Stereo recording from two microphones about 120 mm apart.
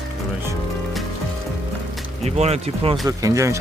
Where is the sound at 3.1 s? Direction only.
30° right (ahead or behind).